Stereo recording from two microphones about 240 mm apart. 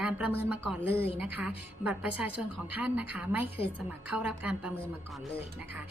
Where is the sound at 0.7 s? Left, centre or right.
Centre.